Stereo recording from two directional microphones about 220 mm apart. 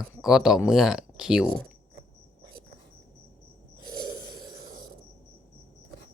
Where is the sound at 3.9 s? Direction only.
20° right (ahead or behind).